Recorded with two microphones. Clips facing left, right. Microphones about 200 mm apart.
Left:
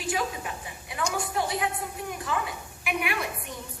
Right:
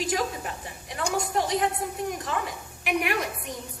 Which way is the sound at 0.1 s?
40° right (ahead or behind).